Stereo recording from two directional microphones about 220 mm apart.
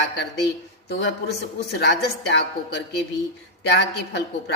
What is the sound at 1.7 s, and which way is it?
A woman's voice, 50° left (ahead or behind).